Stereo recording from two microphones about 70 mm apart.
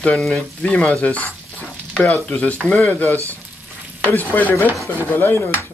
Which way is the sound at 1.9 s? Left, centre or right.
Centre.